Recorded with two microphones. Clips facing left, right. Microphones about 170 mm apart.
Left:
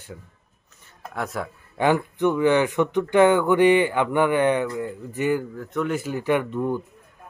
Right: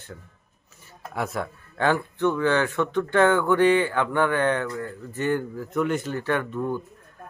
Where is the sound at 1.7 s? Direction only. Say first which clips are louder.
Left 3 dB; 15° left (ahead or behind).